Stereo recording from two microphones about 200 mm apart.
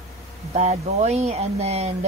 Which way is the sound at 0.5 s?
30° right (ahead or behind).